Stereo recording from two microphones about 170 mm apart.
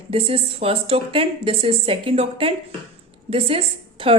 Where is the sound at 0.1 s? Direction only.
35° right (ahead or behind).